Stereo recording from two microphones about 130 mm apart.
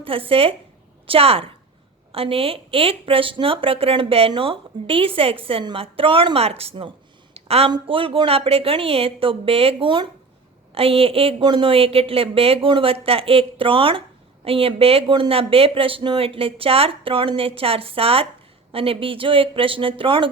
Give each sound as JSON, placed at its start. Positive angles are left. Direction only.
{"t": 0.0, "sound": "speech", "side_deg": -45}
{"t": 7.3, "sound": "a sound", "side_deg": -50}
{"t": 7.7, "sound": "speech", "side_deg": -45}